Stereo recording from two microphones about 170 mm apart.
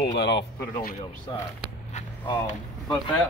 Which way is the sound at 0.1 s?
90° left.